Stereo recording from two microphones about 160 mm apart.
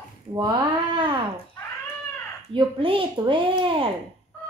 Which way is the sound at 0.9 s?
30° right (ahead or behind).